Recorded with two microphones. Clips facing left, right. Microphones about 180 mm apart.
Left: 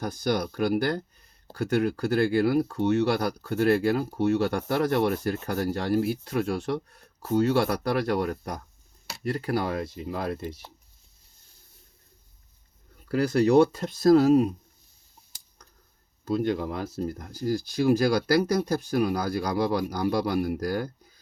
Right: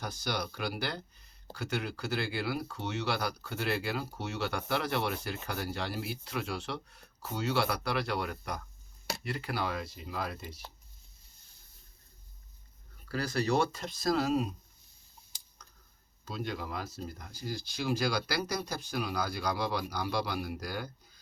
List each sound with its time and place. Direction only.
0.0 s speech: 50° left (ahead or behind)
13.1 s speech: 55° left (ahead or behind)
16.3 s speech: 55° left (ahead or behind)